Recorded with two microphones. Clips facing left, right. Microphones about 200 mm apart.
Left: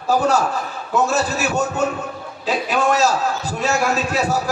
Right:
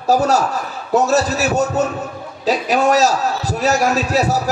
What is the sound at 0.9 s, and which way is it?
A man's voice, 40° right (ahead or behind).